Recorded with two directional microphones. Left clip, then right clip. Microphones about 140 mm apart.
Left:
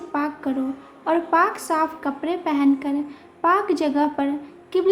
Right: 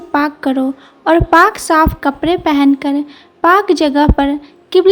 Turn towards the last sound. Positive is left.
turn(degrees=-50)  # may be behind; listen again after turning